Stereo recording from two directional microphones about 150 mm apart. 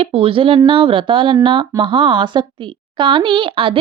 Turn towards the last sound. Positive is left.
turn(degrees=-35)  # may be behind; listen again after turning